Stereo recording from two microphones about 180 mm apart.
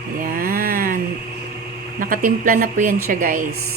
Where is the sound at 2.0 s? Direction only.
50° right (ahead or behind).